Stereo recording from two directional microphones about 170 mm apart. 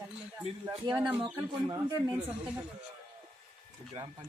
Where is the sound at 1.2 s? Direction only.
25° right (ahead or behind).